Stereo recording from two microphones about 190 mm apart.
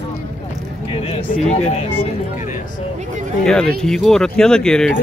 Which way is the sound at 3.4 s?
5° left (ahead or behind).